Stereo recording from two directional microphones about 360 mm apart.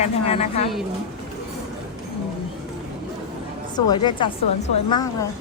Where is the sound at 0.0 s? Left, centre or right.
Centre.